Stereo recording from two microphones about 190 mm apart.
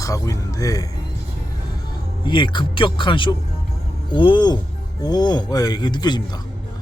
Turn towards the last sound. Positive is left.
turn(degrees=20)  # may be behind; listen again after turning